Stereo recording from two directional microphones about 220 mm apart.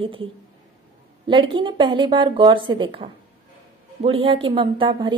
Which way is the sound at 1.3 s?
20° right (ahead or behind).